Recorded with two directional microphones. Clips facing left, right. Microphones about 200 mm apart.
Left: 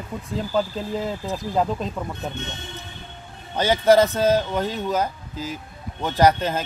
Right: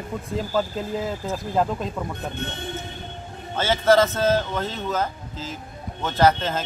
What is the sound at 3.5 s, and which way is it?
Speech, 15° left (ahead or behind).